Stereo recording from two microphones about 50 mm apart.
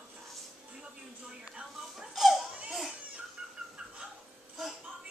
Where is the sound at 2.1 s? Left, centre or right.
Centre.